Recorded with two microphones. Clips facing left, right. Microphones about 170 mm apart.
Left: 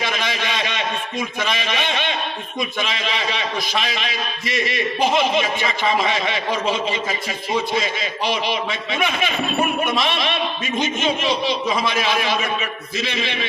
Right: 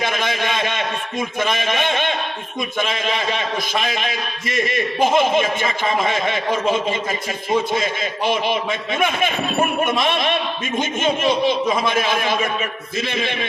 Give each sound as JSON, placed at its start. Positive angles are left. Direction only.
{"t": 0.0, "sound": "a sound", "side_deg": -50}
{"t": 1.4, "sound": "a man's voice", "side_deg": -50}
{"t": 9.0, "sound": "a man's voice", "side_deg": -50}